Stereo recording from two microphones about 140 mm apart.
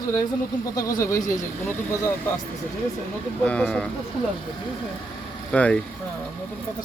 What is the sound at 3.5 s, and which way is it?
Speech, 5° left (ahead or behind).